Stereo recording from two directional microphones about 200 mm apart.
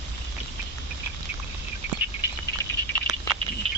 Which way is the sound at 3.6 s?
30° right (ahead or behind).